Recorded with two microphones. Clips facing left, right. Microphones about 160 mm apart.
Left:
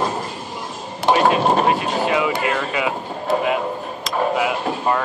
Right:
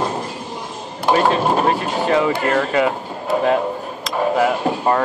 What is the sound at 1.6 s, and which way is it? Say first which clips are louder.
Vehicle: right 1 dB; 40° right (ahead or behind).